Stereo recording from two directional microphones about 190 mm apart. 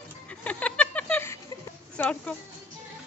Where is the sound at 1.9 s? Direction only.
5° left (ahead or behind).